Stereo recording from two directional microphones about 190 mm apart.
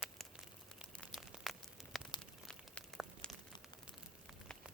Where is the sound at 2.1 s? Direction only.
25° left (ahead or behind).